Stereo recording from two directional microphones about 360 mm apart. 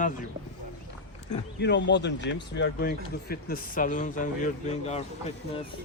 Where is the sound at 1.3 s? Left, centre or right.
Left.